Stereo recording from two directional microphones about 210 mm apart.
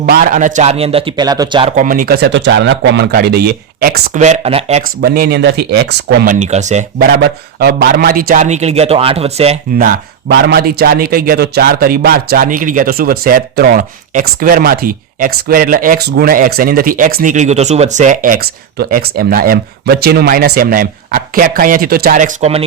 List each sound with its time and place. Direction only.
0.0 s a man's voice: 45° right (ahead or behind); by 1.7 s 20° right (ahead or behind)
1.7 s speech: 40° right (ahead or behind)
4.2 s a man's voice: 30° right (ahead or behind)
4.9 s speech: 45° right (ahead or behind)
6.3 s a man's voice: 35° right (ahead or behind)
7.0 s a man's voice: 50° right (ahead or behind); by 9.6 s 30° right (ahead or behind)
9.7 s speech: 50° right (ahead or behind); by 22.6 s 30° right (ahead or behind)